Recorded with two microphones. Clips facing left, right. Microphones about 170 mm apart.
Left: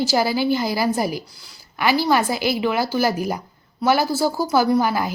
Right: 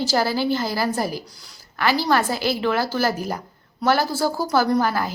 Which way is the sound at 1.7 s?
15° left (ahead or behind).